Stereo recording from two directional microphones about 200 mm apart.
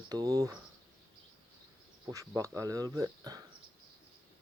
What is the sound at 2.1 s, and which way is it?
Speech, 15° right (ahead or behind).